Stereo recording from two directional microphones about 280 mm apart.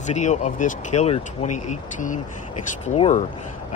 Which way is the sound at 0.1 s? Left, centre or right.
Left.